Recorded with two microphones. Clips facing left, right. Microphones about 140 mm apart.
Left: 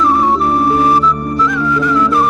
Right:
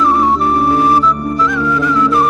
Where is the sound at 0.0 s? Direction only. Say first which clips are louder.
Even; centre (ahead or behind).